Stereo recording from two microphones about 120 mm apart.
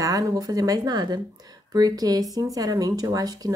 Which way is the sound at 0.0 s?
30° right (ahead or behind).